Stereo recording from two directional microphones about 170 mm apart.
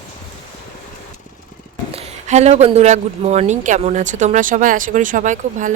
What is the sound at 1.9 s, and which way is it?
Speech, 40° right (ahead or behind).